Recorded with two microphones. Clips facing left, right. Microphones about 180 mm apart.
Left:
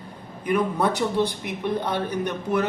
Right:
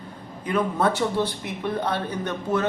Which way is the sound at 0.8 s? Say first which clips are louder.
Even; 15° left (ahead or behind).